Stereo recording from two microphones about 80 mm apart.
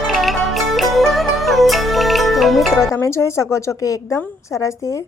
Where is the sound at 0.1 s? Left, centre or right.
Centre.